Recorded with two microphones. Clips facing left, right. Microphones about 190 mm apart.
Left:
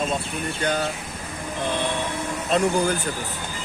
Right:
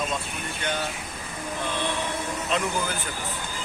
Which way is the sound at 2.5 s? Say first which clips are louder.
Left 8 dB; 40° left (ahead or behind).